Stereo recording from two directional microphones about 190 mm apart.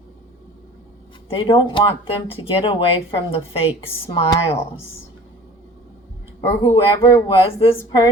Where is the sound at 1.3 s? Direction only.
25° left (ahead or behind).